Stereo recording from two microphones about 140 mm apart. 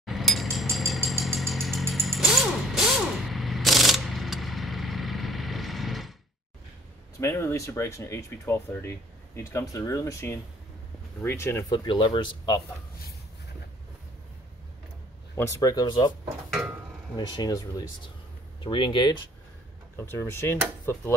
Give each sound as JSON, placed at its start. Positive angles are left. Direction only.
{"t": 0.0, "sound": "vehicle", "side_deg": 0}
{"t": 7.2, "sound": "speech", "side_deg": 20}
{"t": 11.7, "sound": "speech", "side_deg": 35}
{"t": 15.3, "sound": "speech", "side_deg": 25}
{"t": 17.4, "sound": "speech", "side_deg": 30}
{"t": 20.0, "sound": "speech", "side_deg": 20}